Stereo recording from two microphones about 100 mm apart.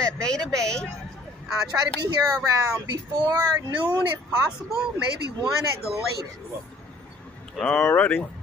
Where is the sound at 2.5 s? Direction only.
35° right (ahead or behind).